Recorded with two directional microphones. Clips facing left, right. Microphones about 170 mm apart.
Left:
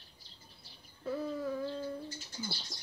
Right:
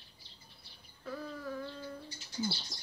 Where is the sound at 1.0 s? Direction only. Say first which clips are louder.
Left 6 dB; 25° left (ahead or behind).